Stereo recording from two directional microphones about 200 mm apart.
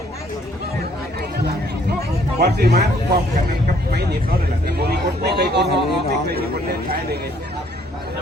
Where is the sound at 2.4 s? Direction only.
55° right (ahead or behind).